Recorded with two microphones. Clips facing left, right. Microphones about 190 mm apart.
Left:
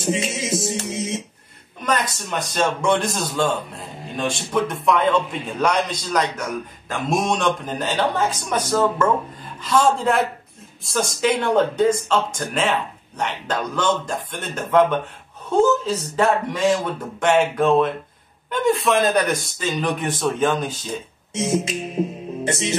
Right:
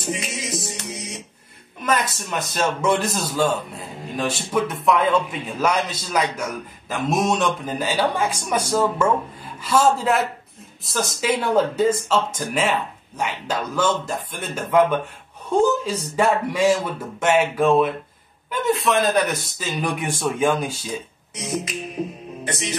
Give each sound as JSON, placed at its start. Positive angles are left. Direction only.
{"t": 0.0, "sound": "music", "side_deg": 25}
{"t": 1.8, "sound": "a man's voice", "side_deg": -5}
{"t": 21.3, "sound": "music", "side_deg": 25}